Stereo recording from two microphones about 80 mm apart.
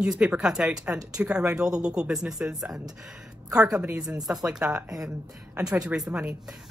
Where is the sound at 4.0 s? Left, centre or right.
Right.